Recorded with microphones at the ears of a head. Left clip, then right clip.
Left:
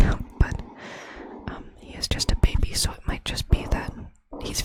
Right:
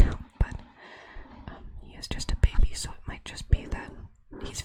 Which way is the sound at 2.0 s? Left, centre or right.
Left.